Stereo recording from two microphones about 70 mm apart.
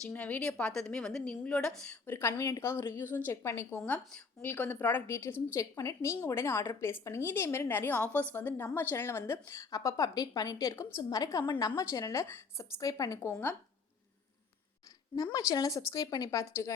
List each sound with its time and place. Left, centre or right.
0.1 s a woman's voice: left
2.0 s a woman's voice: left
2.4 s a woman's voice: left
3.8 s a woman's voice: centre; by 5.6 s left
5.7 s a woman's voice: left
6.2 s a woman's voice: left
9.6 s speech: left
10.8 s a woman's voice: left
11.2 s a woman's voice: left
12.1 s a woman's voice: left
12.8 s speech: left
15.1 s speech: left
16.4 s a woman's voice: left